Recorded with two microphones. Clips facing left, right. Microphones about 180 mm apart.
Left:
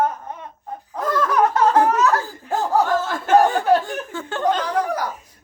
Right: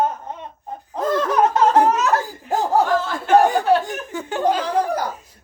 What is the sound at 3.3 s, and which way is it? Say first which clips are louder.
Chuckle: even; 15° right (ahead or behind).